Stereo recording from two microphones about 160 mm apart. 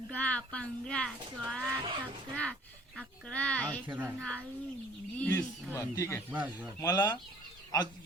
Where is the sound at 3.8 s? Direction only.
10° right (ahead or behind).